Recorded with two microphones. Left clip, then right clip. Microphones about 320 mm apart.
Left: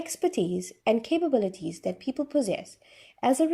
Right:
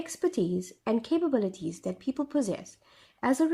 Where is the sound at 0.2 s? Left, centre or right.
Left.